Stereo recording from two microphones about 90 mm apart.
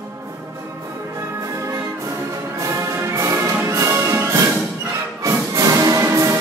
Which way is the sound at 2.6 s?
35° right (ahead or behind).